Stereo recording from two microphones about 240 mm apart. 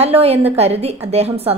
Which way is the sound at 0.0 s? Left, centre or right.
Right.